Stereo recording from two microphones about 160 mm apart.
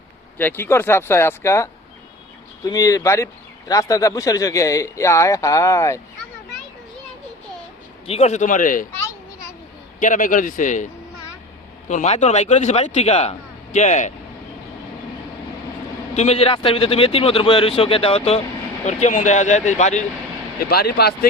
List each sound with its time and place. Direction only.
0.3 s speech: 10° left (ahead or behind)
8.0 s a man's voice: 40° left (ahead or behind); by 8.9 s 55° left (ahead or behind)
8.9 s children playing: 15° left (ahead or behind)
10.0 s a man's voice: 55° left (ahead or behind)
11.9 s a man's voice: 50° left (ahead or behind)
16.1 s a man's voice: 40° left (ahead or behind)
20.6 s speech: 80° left